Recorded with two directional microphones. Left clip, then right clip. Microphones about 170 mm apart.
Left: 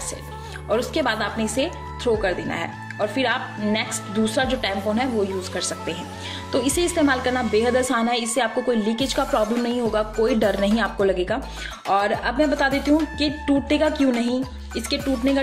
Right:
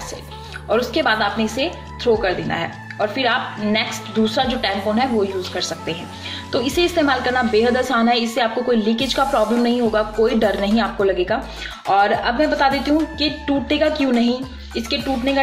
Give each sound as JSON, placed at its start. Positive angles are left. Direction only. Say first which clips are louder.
{"t": 0.7, "sound": "speech", "louder": "right 4 dB", "side_deg": 40}